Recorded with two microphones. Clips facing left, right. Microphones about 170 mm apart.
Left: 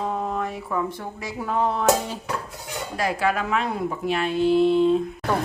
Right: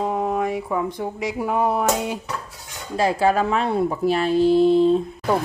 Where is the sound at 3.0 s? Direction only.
30° right (ahead or behind).